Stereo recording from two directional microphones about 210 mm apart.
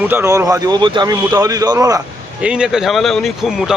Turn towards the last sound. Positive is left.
turn(degrees=0)  # may be behind; listen again after turning